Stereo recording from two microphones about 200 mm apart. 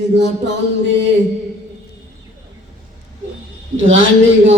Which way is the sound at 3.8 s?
75° right (ahead or behind).